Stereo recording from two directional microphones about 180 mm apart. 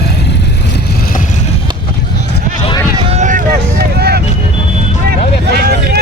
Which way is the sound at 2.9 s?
40° right (ahead or behind).